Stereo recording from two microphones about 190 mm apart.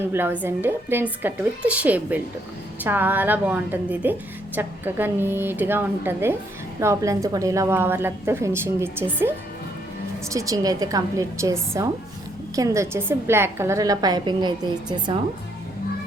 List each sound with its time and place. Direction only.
0.1 s a woman's voice: 10° right (ahead or behind)
10.3 s a woman's voice: 15° right (ahead or behind)